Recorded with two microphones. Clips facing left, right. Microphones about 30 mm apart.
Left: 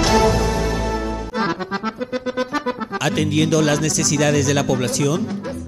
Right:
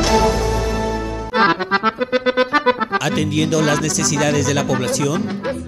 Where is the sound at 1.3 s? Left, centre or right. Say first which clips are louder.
Right 9 dB; right.